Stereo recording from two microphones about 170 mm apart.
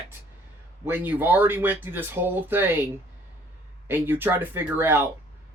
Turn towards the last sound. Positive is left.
turn(degrees=-15)  # may be behind; listen again after turning